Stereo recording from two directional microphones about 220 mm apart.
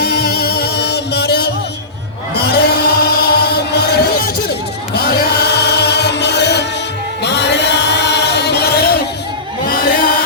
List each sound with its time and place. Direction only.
0.0 s music: 45° left (ahead or behind)
4.9 s chant: 50° left (ahead or behind)
9.6 s a sound: 40° left (ahead or behind)